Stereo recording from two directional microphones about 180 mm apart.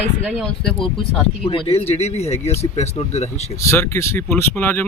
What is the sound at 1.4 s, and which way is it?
Speech, 35° left (ahead or behind).